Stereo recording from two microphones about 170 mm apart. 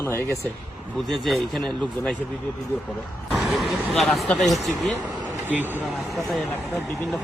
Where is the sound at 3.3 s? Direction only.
Centre (ahead or behind).